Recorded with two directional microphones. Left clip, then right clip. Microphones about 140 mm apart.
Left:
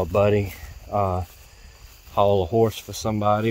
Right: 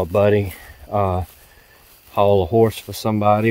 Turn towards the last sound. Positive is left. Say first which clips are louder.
# right 5 dB
turn(degrees=-25)  # may be behind; listen again after turning